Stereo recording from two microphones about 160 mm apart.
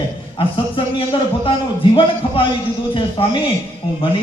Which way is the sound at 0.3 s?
30° left (ahead or behind).